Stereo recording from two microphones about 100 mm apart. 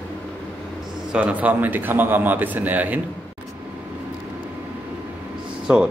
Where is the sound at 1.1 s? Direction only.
15° right (ahead or behind).